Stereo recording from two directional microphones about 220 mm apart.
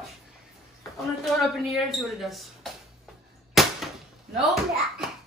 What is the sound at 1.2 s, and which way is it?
Speech, centre (ahead or behind).